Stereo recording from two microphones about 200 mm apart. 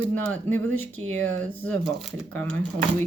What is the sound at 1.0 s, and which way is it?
Speech, 30° right (ahead or behind).